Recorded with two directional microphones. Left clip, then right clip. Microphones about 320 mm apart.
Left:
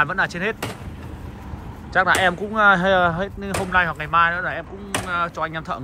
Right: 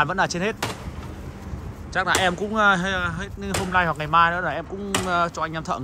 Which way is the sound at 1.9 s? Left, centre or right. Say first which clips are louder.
Left 4 dB; centre.